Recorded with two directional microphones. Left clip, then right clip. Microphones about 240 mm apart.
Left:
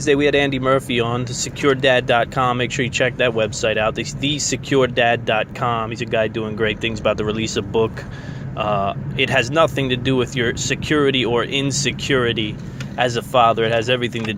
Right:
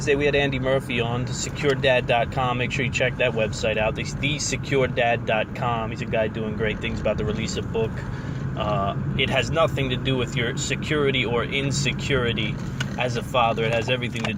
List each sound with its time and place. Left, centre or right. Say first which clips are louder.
0.0 s speech: left 5 dB; left